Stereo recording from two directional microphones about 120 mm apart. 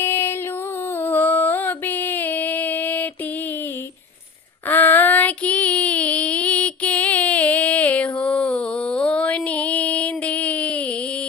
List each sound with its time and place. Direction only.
0.0 s music: 20° left (ahead or behind)
4.7 s child singing: 15° left (ahead or behind)